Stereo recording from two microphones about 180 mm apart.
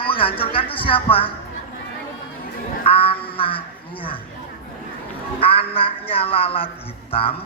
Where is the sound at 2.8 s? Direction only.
30° left (ahead or behind).